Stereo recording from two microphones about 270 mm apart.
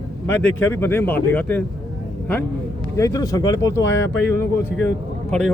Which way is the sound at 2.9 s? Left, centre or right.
Centre.